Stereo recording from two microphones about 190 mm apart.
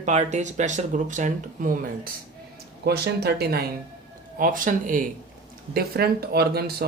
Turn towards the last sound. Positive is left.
turn(degrees=-55)  # may be behind; listen again after turning